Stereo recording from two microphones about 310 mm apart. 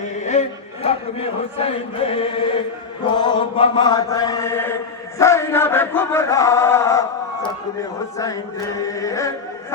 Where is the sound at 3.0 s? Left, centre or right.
Centre.